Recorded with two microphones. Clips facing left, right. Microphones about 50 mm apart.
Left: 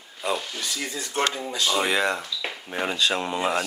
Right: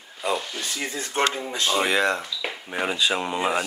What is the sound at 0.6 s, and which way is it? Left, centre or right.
Speech, right.